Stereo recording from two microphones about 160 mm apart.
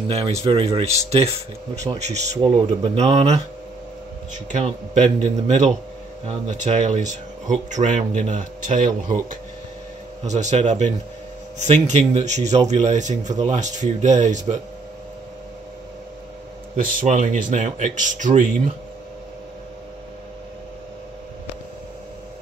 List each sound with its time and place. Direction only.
0.1 s speech: 40° right (ahead or behind)
10.2 s speech: 45° right (ahead or behind)
17.0 s speech: 50° right (ahead or behind)